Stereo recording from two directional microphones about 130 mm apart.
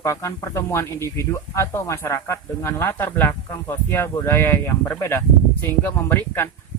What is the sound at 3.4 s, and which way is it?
Speech, 25° left (ahead or behind).